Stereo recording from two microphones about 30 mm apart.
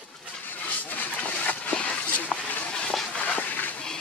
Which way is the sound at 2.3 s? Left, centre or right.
Centre.